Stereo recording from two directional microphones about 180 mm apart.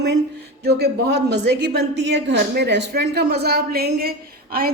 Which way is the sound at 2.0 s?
70° right (ahead or behind).